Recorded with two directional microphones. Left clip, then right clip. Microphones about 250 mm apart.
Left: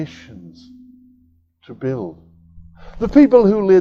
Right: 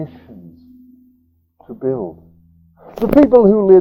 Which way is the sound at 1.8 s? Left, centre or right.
Left.